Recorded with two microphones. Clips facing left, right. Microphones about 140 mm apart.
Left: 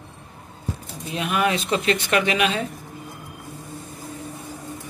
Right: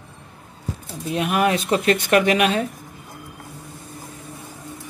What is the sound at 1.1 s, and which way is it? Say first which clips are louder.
Speech: right 3 dB; 45° right (ahead or behind).